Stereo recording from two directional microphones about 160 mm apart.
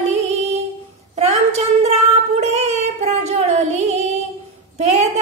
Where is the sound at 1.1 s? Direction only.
40° right (ahead or behind).